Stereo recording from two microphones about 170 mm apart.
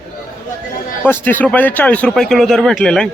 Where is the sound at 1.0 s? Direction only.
10° left (ahead or behind).